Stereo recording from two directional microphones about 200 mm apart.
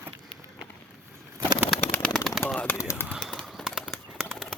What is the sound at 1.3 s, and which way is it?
Bird, 15° right (ahead or behind).